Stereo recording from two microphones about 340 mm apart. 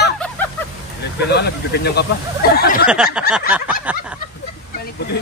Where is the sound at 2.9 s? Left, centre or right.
Centre.